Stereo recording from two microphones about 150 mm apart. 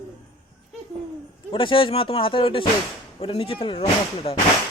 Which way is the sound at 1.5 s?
35° left (ahead or behind).